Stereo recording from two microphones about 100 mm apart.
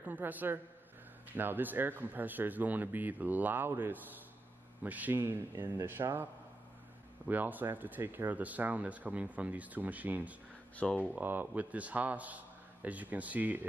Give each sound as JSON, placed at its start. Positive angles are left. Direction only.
{"t": 0.0, "sound": "speech", "side_deg": -15}
{"t": 7.2, "sound": "speech", "side_deg": -15}
{"t": 10.8, "sound": "speech", "side_deg": 15}
{"t": 11.1, "sound": "speech", "side_deg": -20}